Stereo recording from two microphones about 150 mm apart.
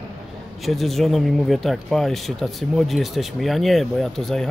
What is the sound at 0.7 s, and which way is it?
Speech, centre (ahead or behind).